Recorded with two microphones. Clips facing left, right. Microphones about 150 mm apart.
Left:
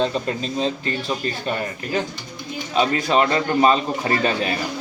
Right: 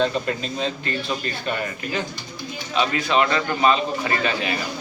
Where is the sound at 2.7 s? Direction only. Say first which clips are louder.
Left 2 dB; 40° left (ahead or behind).